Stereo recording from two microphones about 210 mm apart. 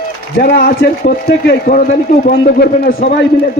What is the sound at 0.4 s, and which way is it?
A man's voice, 45° left (ahead or behind).